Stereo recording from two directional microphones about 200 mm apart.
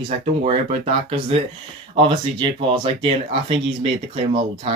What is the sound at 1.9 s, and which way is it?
Speech, 25° right (ahead or behind).